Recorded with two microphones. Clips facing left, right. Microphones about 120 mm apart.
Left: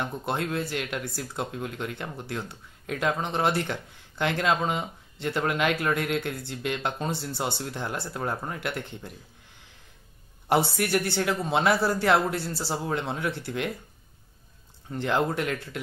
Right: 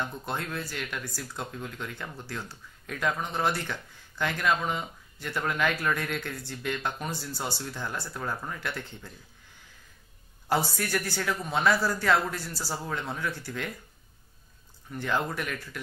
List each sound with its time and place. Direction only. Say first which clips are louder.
0.0 s speech: left 4 dB; 20° left (ahead or behind)
10.5 s speech: left 4 dB; 25° left (ahead or behind)
14.9 s speech: left 4 dB; 25° left (ahead or behind)